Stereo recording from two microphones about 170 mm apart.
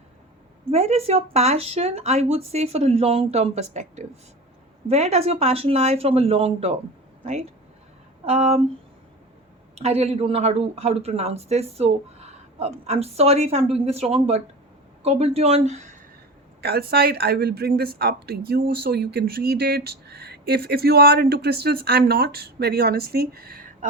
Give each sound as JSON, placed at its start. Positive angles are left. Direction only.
{"t": 0.7, "sound": "speech", "side_deg": -40}
{"t": 8.2, "sound": "speech", "side_deg": -40}
{"t": 9.7, "sound": "speech", "side_deg": -40}
{"t": 16.6, "sound": "speech", "side_deg": -65}